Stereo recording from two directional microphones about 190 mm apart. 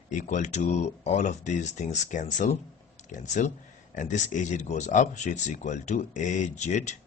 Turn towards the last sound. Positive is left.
turn(degrees=40)  # may be behind; listen again after turning